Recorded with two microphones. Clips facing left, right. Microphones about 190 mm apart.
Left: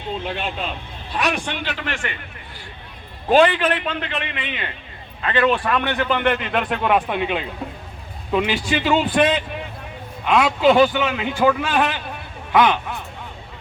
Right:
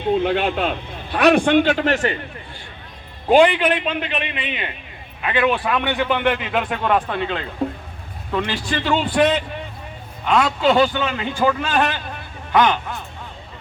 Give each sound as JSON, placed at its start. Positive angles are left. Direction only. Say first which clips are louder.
{"t": 0.3, "sound": "a man's voice", "louder": "right 7 dB", "side_deg": -65}
{"t": 3.2, "sound": "a man's voice", "louder": "right 2 dB", "side_deg": -15}